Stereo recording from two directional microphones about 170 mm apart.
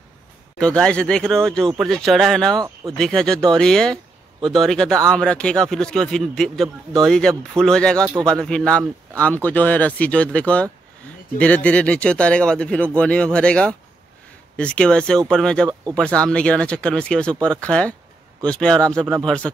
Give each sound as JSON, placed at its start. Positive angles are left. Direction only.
{"t": 0.6, "sound": "speech", "side_deg": 5}
{"t": 2.5, "sound": "speech", "side_deg": -25}
{"t": 3.0, "sound": "speech", "side_deg": 5}